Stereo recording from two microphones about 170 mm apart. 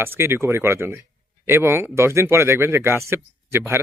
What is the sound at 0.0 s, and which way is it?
Speech, 15° right (ahead or behind).